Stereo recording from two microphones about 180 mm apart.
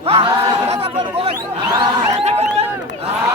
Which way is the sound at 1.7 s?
20° right (ahead or behind).